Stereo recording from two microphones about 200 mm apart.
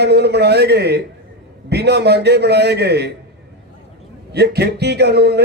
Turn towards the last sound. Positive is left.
turn(degrees=-55)  # may be behind; listen again after turning